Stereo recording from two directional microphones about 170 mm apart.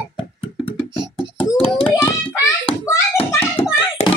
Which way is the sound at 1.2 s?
30° left (ahead or behind).